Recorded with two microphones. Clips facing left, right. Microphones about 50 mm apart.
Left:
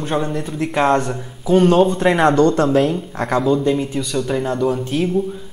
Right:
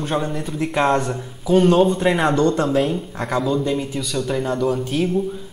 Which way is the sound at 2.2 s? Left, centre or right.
Left.